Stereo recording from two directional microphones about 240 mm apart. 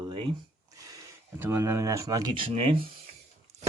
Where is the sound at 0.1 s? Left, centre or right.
Right.